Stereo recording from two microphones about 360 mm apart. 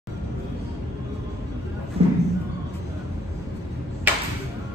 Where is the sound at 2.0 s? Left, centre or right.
Centre.